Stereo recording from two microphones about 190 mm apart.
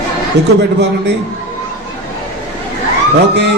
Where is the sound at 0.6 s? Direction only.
65° right (ahead or behind).